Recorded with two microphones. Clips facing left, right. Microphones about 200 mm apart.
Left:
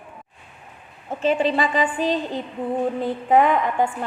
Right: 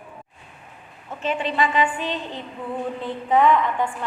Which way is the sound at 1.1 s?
35° left (ahead or behind).